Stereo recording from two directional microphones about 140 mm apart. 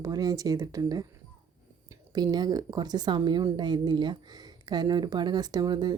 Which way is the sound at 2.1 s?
30° right (ahead or behind).